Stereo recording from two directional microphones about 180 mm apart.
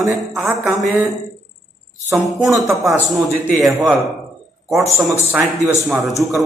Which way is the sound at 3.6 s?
Centre (ahead or behind).